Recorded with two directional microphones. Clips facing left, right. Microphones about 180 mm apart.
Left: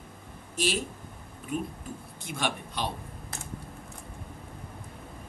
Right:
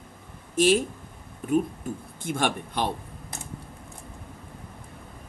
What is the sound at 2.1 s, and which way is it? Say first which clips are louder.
Speech: right 5 dB; 50° right (ahead or behind).